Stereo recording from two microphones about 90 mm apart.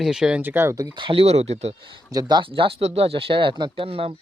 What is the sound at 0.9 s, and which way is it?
Speech, 70° right (ahead or behind).